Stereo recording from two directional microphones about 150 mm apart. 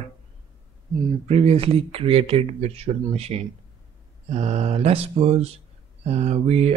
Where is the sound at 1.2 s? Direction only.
40° right (ahead or behind).